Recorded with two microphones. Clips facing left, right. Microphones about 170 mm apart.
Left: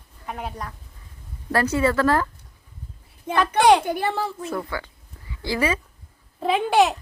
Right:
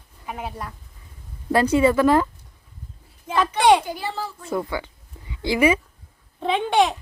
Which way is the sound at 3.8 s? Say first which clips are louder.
Left 5 dB; 60° left (ahead or behind).